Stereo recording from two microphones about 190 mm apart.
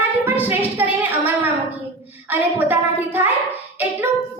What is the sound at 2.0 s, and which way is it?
A woman's voice, 10° right (ahead or behind).